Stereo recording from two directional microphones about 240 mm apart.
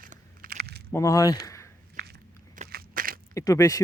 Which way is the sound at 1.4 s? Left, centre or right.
Centre.